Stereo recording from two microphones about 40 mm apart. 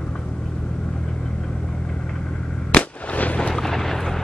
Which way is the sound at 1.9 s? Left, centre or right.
Centre.